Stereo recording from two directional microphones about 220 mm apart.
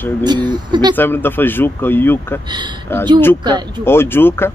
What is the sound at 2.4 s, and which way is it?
Speech, 20° right (ahead or behind).